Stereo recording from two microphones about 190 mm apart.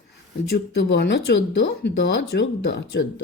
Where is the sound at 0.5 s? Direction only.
65° left (ahead or behind).